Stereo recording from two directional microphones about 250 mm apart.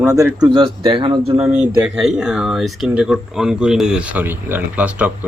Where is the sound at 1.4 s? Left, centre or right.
Centre.